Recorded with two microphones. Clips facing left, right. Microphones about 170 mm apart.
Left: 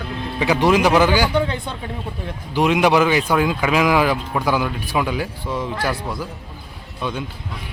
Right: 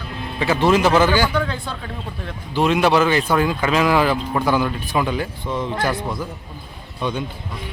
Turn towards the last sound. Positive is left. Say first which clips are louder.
# right 2 dB
turn(degrees=5)  # may be behind; listen again after turning